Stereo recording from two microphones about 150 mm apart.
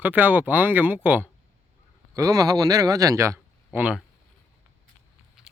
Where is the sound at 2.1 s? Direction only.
25° right (ahead or behind).